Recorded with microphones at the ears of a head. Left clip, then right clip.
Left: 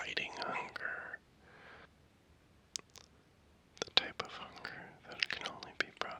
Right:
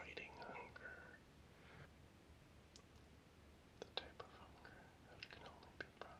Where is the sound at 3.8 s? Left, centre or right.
Left.